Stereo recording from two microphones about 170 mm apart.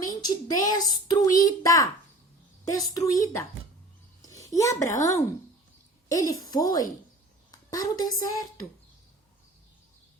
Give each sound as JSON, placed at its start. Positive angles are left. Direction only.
{"t": 0.1, "sound": "a woman's voice", "side_deg": 25}